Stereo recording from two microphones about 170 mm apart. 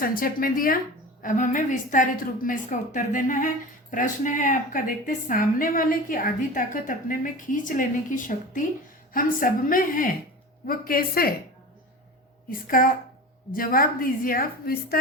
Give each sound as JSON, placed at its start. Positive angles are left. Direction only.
{"t": 0.0, "sound": "a woman's voice", "side_deg": 60}
{"t": 12.5, "sound": "a woman's voice", "side_deg": 55}